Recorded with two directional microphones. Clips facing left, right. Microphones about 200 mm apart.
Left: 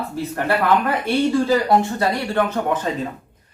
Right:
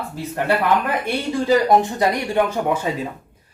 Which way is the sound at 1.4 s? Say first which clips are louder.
Right 1 dB; 15° right (ahead or behind).